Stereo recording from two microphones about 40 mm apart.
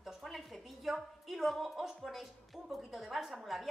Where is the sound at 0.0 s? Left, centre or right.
Centre.